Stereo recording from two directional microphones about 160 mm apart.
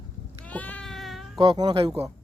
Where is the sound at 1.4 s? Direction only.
25° right (ahead or behind).